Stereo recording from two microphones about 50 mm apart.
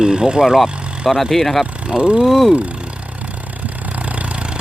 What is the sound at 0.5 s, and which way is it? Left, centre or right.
Speech, centre.